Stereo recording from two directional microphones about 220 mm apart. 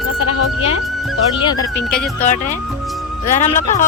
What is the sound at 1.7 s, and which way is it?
Speech, 5° left (ahead or behind).